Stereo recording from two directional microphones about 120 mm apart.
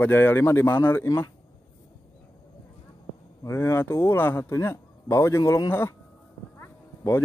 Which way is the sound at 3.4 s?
25° left (ahead or behind).